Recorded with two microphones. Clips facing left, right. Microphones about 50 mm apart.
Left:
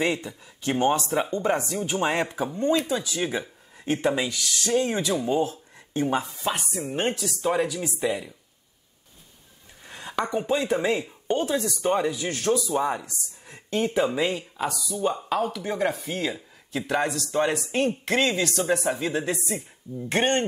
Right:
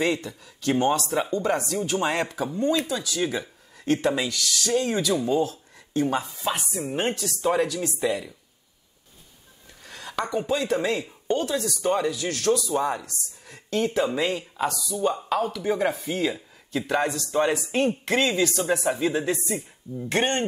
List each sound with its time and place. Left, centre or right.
0.0 s speech: centre
6.1 s speech: centre
9.8 s a sound: left
10.3 s speech: left; by 20.1 s centre